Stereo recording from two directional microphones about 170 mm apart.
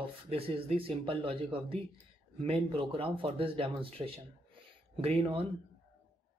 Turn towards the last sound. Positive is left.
turn(degrees=-35)  # may be behind; listen again after turning